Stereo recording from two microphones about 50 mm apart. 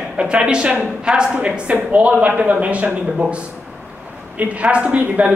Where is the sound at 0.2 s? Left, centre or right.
Right.